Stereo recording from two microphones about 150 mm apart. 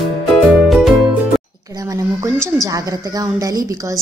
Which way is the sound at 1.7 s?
20° right (ahead or behind).